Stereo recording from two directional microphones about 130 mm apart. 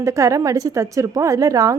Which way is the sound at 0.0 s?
25° right (ahead or behind).